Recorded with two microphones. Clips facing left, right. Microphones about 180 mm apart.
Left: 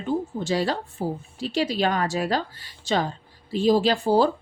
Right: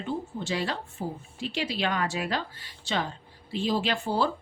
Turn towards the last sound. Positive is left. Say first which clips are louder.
# left 7 dB
turn(degrees=40)  # may be behind; listen again after turning